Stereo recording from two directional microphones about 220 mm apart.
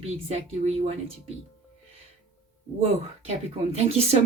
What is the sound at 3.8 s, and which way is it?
Speech, 30° right (ahead or behind).